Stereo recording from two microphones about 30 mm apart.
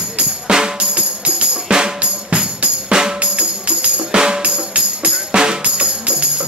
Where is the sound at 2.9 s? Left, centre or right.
Right.